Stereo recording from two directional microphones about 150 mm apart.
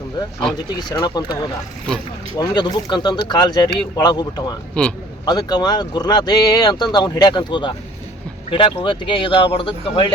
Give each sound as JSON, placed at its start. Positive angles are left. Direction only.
{"t": 0.9, "sound": "speech", "side_deg": 30}
{"t": 2.4, "sound": "speech", "side_deg": 25}
{"t": 4.7, "sound": "a man's voice", "side_deg": 5}
{"t": 5.2, "sound": "speech", "side_deg": 25}